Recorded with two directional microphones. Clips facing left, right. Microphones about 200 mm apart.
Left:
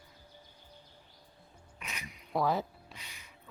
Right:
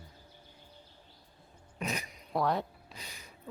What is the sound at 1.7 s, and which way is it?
Speech, 40° right (ahead or behind).